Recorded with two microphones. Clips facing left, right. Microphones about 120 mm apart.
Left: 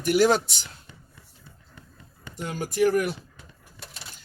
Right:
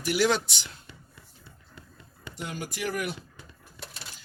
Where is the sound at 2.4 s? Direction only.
40° left (ahead or behind).